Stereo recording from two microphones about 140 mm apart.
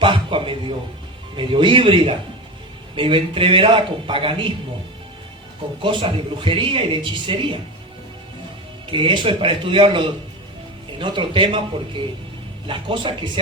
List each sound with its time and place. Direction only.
0.0 s a sound: 40° right (ahead or behind)
1.4 s a man's voice: 35° right (ahead or behind)
5.8 s a man's voice: 35° right (ahead or behind)
8.9 s a man's voice: 35° right (ahead or behind)
12.6 s a man's voice: 35° right (ahead or behind)